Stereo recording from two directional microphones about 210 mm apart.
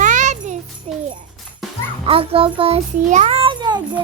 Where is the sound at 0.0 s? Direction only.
35° right (ahead or behind).